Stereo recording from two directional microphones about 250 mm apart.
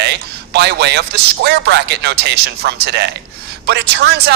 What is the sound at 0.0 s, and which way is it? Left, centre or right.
A man's voice, right.